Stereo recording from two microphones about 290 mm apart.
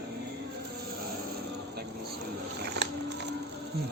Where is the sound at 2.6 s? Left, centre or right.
Right.